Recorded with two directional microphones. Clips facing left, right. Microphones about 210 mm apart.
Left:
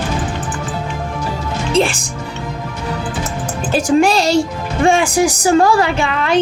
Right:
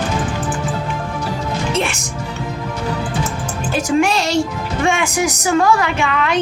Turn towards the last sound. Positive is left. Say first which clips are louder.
# left 1 dB
turn(degrees=30)  # may be behind; listen again after turning